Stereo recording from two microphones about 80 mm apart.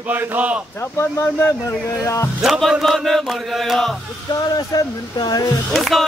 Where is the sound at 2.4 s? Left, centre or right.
Centre.